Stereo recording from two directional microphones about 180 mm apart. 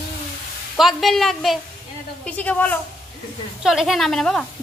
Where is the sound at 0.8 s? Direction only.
Centre (ahead or behind).